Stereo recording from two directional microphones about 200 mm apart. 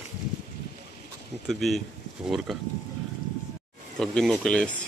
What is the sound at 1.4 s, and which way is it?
Speech, centre (ahead or behind).